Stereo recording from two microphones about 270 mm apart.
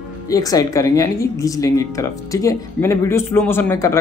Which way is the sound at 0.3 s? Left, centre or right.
Centre.